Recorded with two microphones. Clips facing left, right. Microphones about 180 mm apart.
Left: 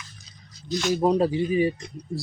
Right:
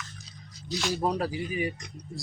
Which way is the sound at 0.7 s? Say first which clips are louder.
Left 6 dB; 5° right (ahead or behind).